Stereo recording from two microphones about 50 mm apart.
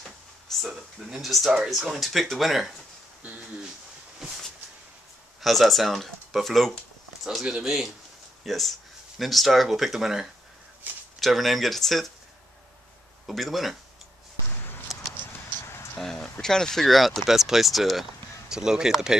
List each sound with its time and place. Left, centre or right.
0.0 s a sound: centre
1.7 s speech: centre
4.2 s a sound: centre
5.4 s speech: centre
7.4 s speech: centre
8.5 s speech: centre
11.1 s speech: centre
13.3 s speech: centre
14.9 s a sound: centre
15.6 s a sound: left
16.0 s speech: centre
18.5 s speech: centre